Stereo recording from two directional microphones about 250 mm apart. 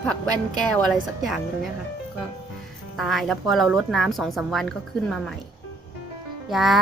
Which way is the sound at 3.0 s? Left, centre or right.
Centre.